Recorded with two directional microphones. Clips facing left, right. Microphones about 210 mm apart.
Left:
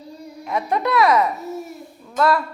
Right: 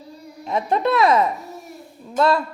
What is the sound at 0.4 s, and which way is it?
Speech, 25° right (ahead or behind).